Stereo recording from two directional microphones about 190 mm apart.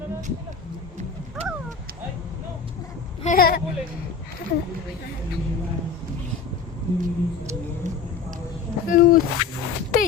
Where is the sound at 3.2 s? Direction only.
50° left (ahead or behind).